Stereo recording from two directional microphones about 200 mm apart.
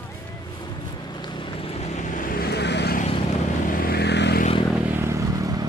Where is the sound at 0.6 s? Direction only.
20° left (ahead or behind); by 4.4 s 55° left (ahead or behind).